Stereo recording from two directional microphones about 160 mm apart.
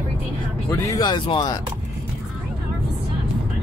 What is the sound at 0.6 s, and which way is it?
Speech, 20° left (ahead or behind).